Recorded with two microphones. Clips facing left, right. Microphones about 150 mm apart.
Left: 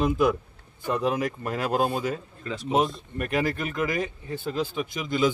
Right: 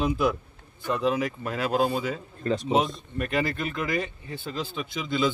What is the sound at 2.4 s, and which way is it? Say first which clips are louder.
Speech: right 8 dB; 40° right (ahead or behind).